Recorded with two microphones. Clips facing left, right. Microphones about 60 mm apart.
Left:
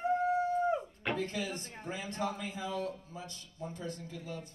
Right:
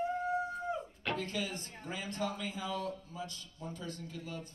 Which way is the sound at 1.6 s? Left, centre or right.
Left.